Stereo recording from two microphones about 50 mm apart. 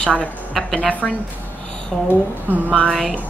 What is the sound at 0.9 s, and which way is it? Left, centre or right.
Speech, left.